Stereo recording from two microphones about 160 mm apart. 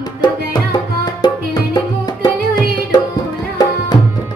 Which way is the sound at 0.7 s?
25° left (ahead or behind).